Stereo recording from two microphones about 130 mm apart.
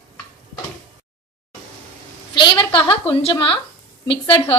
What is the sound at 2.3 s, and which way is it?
Speech, 40° left (ahead or behind).